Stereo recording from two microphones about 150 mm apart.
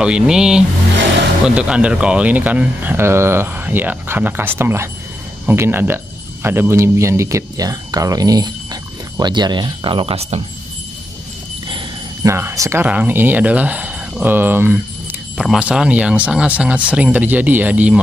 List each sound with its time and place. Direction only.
0.0 s speech: 5° right (ahead or behind); by 10.4 s 40° right (ahead or behind)
12.2 s speech: 20° right (ahead or behind)
15.3 s speech: 5° right (ahead or behind)